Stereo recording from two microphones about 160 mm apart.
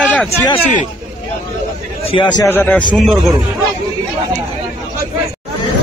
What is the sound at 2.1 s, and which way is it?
Speech, 30° left (ahead or behind).